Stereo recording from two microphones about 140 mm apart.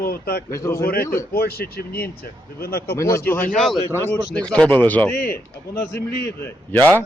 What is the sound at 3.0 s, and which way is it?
Speech, 20° left (ahead or behind).